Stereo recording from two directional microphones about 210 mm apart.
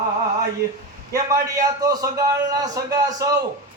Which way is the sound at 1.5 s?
15° right (ahead or behind).